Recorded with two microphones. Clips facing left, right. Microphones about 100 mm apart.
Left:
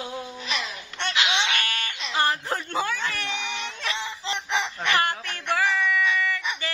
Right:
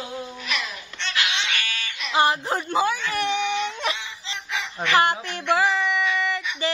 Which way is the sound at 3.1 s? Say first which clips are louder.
Right 8 dB; 20° right (ahead or behind).